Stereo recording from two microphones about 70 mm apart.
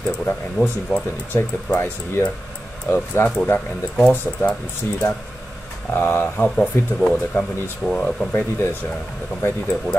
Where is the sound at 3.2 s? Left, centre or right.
Left.